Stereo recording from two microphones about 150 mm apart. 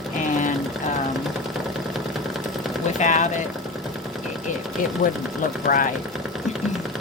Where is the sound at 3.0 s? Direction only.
55° left (ahead or behind).